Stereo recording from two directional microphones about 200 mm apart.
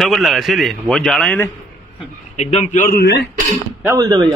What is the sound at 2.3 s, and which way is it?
Speech, 35° left (ahead or behind).